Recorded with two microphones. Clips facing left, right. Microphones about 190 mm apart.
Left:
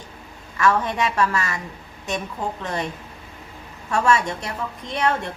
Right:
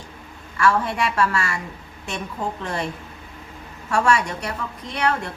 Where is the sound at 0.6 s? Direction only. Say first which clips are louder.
Even; 20° left (ahead or behind).